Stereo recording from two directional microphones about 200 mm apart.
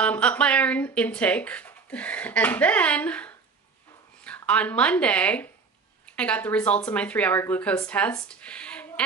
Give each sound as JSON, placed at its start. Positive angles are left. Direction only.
{"t": 0.0, "sound": "speech", "side_deg": 5}